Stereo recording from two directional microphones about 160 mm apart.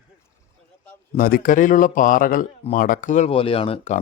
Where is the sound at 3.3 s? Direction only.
35° left (ahead or behind).